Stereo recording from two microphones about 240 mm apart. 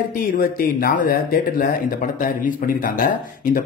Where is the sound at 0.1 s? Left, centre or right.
Left.